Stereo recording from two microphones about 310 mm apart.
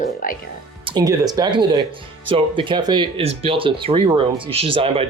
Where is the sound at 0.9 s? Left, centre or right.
Centre.